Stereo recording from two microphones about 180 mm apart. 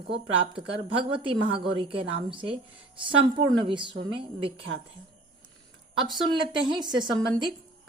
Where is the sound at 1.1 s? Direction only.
30° right (ahead or behind).